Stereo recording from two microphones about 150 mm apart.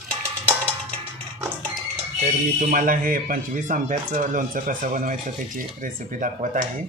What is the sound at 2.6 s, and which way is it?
Speech, 65° right (ahead or behind).